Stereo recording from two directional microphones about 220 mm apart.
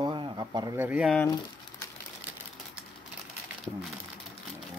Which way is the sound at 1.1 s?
15° left (ahead or behind).